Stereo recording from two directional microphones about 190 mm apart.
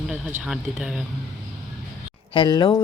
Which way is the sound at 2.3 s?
25° left (ahead or behind).